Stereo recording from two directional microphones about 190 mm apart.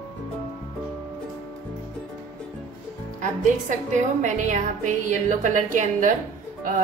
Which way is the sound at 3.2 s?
40° right (ahead or behind).